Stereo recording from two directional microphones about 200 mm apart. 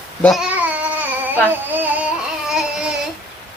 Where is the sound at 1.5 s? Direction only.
10° right (ahead or behind).